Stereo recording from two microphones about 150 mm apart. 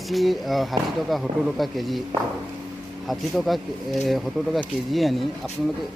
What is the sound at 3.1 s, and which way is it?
Speech, centre (ahead or behind).